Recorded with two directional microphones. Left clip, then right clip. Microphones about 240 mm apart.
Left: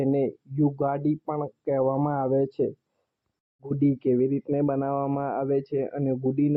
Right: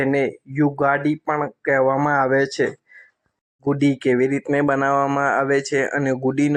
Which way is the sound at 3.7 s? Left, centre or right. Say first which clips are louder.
Right 5 dB; right.